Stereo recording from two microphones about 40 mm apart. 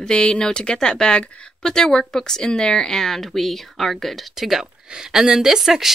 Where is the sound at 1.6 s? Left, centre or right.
Centre.